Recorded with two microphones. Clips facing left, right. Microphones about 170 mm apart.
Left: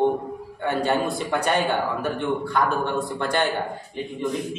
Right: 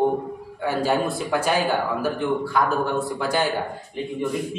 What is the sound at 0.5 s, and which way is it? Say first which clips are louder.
A man's voice: right 1 dB; 5° right (ahead or behind).